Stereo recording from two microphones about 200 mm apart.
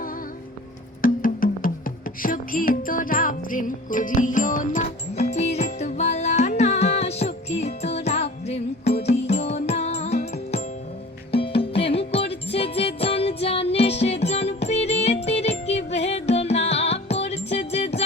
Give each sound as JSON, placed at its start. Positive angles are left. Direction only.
{"t": 1.0, "sound": "music", "side_deg": 45}